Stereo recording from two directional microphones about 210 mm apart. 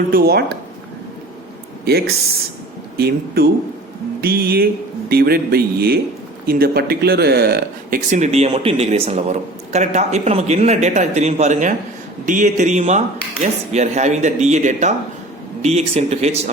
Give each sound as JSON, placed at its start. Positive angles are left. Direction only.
{"t": 0.1, "sound": "speech", "side_deg": -50}
{"t": 1.8, "sound": "speech", "side_deg": -50}